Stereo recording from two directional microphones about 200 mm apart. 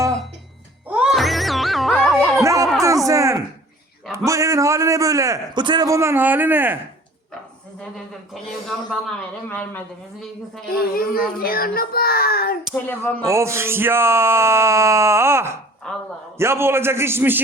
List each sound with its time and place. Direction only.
0.9 s music: 5° right (ahead or behind)
2.4 s a sound: 15° right (ahead or behind)
4.3 s a man's voice: 15° right (ahead or behind)
7.8 s a man's voice: centre (ahead or behind)
10.9 s a child's voice: 50° left (ahead or behind)
12.7 s speech: 10° left (ahead or behind)
13.2 s a man's voice: 15° right (ahead or behind)
15.9 s a man's voice: 5° left (ahead or behind)
16.4 s a man's voice: 10° right (ahead or behind)